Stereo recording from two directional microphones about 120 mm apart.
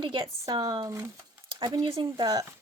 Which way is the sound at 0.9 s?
25° right (ahead or behind).